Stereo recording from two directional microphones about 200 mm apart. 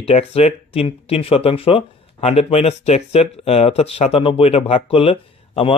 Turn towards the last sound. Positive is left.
turn(degrees=25)  # may be behind; listen again after turning